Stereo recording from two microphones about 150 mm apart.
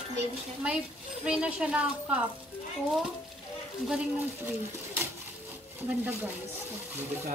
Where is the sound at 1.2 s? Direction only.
5° right (ahead or behind).